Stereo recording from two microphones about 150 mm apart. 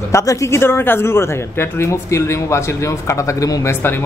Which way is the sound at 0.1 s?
20° left (ahead or behind).